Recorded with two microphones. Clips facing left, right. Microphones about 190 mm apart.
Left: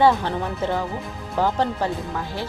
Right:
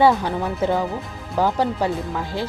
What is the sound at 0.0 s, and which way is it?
Speech, 10° right (ahead or behind).